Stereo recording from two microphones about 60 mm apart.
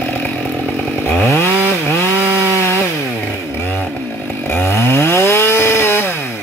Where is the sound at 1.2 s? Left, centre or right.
Left.